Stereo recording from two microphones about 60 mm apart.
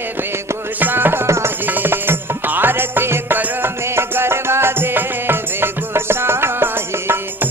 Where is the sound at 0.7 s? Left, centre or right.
Right.